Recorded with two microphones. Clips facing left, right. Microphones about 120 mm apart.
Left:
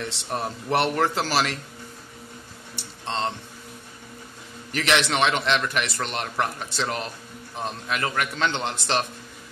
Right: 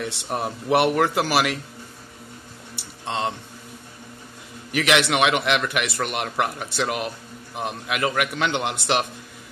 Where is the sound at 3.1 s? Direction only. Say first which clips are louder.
Right 1 dB; 15° right (ahead or behind).